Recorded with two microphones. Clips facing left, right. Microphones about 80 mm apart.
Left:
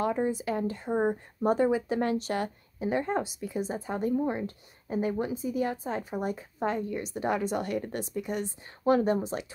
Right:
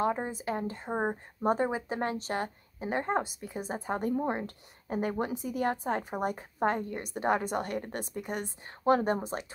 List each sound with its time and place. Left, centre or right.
0.0 s a woman's voice: right